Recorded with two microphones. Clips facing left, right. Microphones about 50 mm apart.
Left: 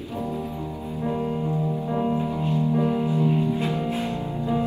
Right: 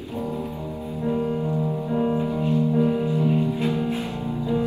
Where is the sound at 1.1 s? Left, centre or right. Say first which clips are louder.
Right 3 dB; left.